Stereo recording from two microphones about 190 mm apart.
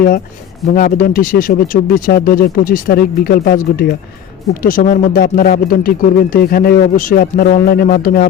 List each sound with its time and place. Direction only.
0.7 s speech: 45° left (ahead or behind)